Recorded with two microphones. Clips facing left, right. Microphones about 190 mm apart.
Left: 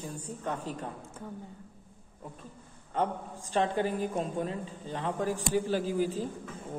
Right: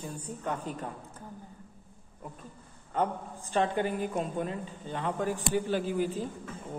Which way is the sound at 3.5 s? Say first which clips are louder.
Even; 35° left (ahead or behind).